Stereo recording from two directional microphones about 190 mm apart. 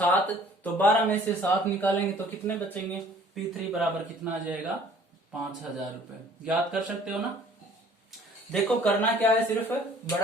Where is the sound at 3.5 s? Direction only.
Centre (ahead or behind).